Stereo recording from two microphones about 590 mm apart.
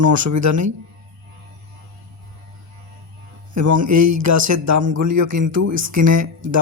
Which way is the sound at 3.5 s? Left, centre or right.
Right.